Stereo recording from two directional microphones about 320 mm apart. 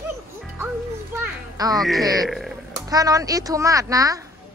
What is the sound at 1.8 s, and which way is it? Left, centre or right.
Speech, centre.